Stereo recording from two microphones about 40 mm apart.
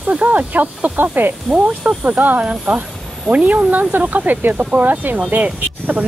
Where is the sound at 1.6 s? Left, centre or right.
Right.